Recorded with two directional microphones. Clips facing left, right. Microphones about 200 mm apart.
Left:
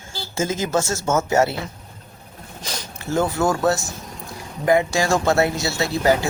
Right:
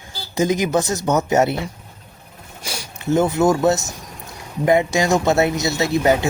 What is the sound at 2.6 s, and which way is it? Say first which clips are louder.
Speech: right 3 dB; 10° right (ahead or behind).